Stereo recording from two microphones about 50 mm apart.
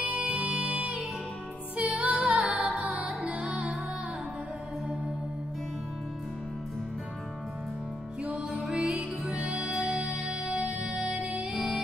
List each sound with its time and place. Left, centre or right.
0.0 s music: centre
8.2 s music: centre
9.2 s music: right